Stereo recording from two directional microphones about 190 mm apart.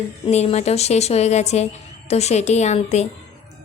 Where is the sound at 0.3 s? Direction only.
35° left (ahead or behind).